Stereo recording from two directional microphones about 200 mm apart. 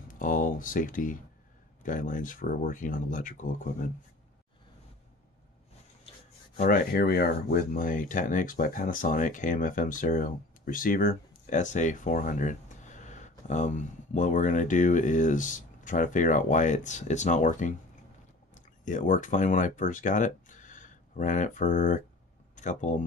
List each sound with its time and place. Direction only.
0.1 s speech: 45° left (ahead or behind)
6.5 s speech: 45° left (ahead or behind)